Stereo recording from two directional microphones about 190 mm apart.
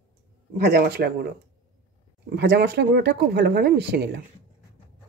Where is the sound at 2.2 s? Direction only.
65° right (ahead or behind).